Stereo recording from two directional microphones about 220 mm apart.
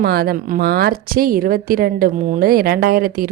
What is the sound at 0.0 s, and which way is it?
A woman's voice, 45° right (ahead or behind).